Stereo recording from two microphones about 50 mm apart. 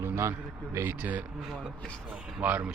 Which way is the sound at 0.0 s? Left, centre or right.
Right.